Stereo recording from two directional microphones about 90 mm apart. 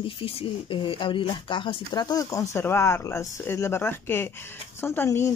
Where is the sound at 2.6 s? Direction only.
30° left (ahead or behind).